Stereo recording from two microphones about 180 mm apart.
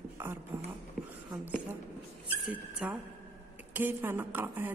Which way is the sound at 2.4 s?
5° right (ahead or behind).